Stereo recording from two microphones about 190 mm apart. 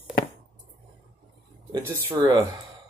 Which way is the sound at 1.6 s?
20° right (ahead or behind).